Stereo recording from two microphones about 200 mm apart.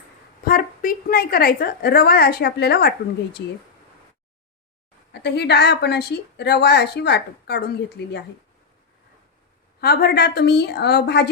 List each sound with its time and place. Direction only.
0.4 s a woman's voice: 45° left (ahead or behind)
5.1 s a woman's voice: 55° left (ahead or behind)
9.8 s a woman's voice: 50° left (ahead or behind)